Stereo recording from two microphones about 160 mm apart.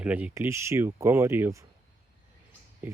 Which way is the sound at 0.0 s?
10° right (ahead or behind).